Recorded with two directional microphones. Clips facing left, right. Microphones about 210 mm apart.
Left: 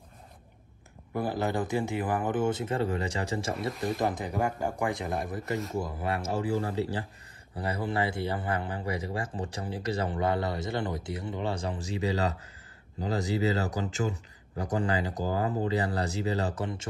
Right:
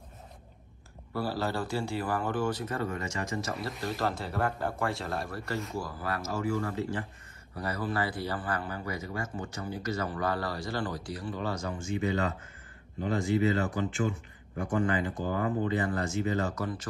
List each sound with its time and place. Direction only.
1.1 s speech: 20° left (ahead or behind)
4.0 s speech: 15° left (ahead or behind)